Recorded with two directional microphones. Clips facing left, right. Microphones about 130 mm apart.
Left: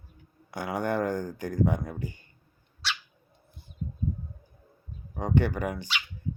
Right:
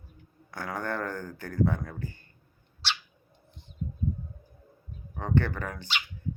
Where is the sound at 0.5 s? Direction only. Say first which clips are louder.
Left 4 dB; 15° left (ahead or behind).